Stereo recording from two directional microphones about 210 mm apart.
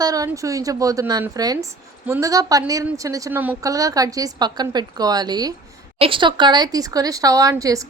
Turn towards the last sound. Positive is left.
turn(degrees=-15)  # may be behind; listen again after turning